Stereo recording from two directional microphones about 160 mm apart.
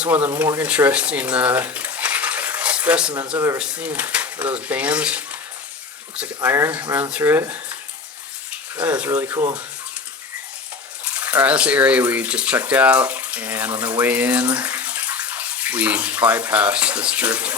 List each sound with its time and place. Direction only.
0.0 s speech: 10° right (ahead or behind)
3.3 s speech: 20° right (ahead or behind)
3.6 s speech: 10° right (ahead or behind)
8.7 s speech: 10° right (ahead or behind)
11.0 s speech: 10° right (ahead or behind)